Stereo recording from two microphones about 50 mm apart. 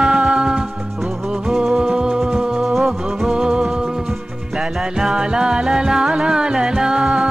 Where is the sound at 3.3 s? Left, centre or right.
Centre.